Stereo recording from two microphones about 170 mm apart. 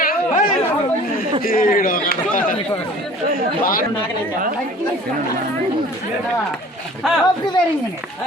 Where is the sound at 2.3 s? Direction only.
55° left (ahead or behind).